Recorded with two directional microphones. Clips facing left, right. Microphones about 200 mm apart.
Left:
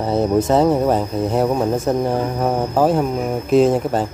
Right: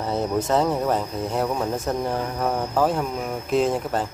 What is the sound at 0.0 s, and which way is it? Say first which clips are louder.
Speech: left 7 dB; 30° left (ahead or behind).